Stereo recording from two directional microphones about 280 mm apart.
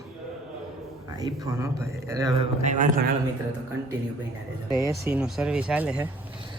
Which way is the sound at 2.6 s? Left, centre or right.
Right.